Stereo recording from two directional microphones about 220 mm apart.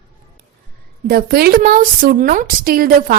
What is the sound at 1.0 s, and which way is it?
Speech, 40° right (ahead or behind).